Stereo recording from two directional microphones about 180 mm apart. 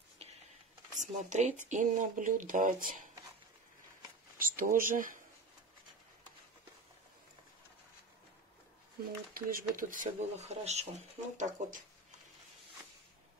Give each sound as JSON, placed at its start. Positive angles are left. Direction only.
{"t": 0.2, "sound": "a sound", "side_deg": -35}
{"t": 0.9, "sound": "speech", "side_deg": -45}
{"t": 4.4, "sound": "speech", "side_deg": -50}
{"t": 9.3, "sound": "speech", "side_deg": -50}